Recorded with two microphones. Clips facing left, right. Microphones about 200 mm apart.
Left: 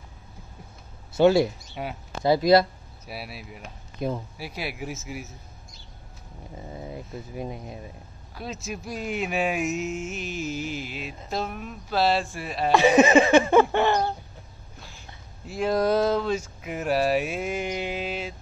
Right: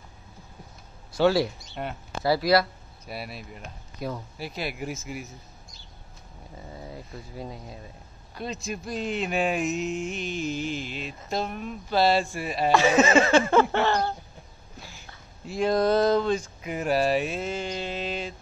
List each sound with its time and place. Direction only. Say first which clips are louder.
1.1 s speech: left 3 dB; 20° left (ahead or behind)
1.8 s speech: even; 5° left (ahead or behind)
2.2 s speech: left 3 dB; 20° left (ahead or behind)
3.1 s speech: right 1 dB; 5° left (ahead or behind)
4.0 s speech: left 4 dB; 20° left (ahead or behind)
4.4 s speech: right 1 dB; 5° left (ahead or behind)
6.7 s speech: left 4 dB; 20° left (ahead or behind)
8.4 s speech: right 1 dB; 5° left (ahead or behind)
12.7 s speech: left 3 dB; 15° left (ahead or behind)
15.4 s speech: right 1 dB; 5° left (ahead or behind)